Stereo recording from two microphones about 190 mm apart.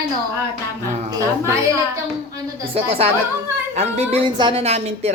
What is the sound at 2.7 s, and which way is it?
A woman's voice, 30° right (ahead or behind).